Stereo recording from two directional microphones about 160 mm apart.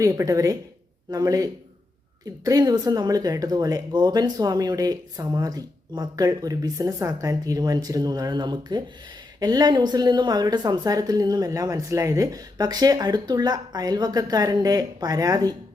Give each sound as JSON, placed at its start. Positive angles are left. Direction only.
{"t": 0.0, "sound": "speech", "side_deg": -20}